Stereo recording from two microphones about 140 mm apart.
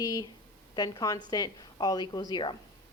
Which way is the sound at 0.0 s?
30° left (ahead or behind).